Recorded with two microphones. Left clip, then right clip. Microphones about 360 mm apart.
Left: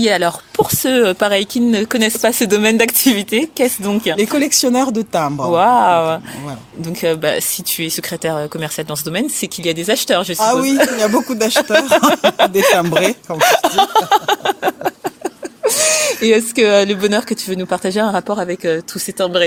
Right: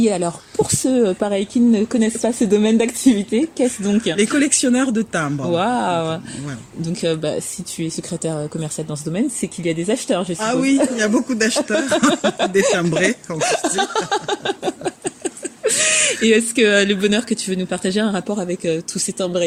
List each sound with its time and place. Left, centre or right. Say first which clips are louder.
0.0 s speech: left 5 dB; left
10.4 s speech: left 4 dB; centre
12.1 s speech: left 5 dB; left
13.4 s a sound: left 8 dB; left
15.6 s speech: left 3 dB; centre